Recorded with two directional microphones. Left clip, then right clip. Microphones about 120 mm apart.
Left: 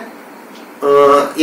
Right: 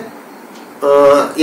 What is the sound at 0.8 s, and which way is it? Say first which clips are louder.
Speech: even; 10° right (ahead or behind).